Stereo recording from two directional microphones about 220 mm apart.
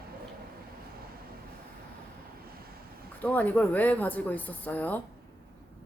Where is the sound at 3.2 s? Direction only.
5° left (ahead or behind).